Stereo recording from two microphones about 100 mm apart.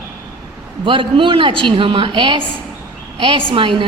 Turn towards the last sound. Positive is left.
turn(degrees=-60)  # may be behind; listen again after turning